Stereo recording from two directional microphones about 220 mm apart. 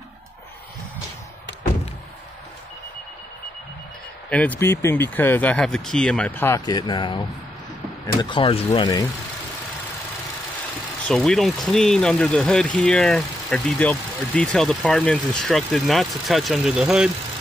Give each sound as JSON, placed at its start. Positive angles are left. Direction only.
{"t": 4.3, "sound": "speech", "side_deg": 5}
{"t": 11.1, "sound": "speech", "side_deg": 0}